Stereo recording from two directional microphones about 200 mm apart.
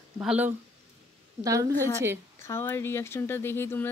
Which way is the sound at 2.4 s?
10° left (ahead or behind).